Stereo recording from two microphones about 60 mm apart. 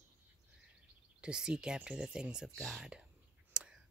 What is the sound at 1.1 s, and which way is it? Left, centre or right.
Speech, centre.